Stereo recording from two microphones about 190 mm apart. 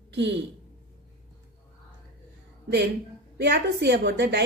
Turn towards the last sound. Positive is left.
turn(degrees=-60)  # may be behind; listen again after turning